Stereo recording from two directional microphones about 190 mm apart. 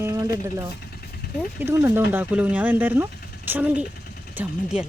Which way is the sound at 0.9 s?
55° left (ahead or behind).